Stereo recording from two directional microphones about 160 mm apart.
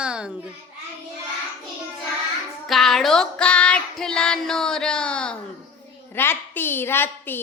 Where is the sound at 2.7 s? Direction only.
Centre (ahead or behind).